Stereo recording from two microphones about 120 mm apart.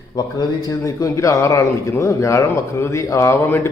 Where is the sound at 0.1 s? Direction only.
35° left (ahead or behind).